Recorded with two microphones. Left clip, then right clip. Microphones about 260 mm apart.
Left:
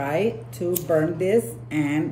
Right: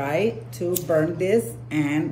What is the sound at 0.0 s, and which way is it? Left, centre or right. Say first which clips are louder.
A man's voice: even; centre.